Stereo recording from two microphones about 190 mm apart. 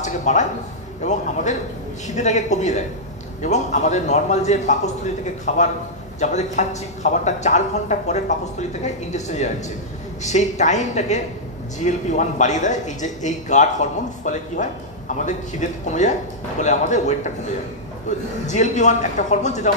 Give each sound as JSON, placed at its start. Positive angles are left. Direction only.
{"t": 0.0, "sound": "a man's voice", "side_deg": 40}
{"t": 18.5, "sound": "a man's voice", "side_deg": 40}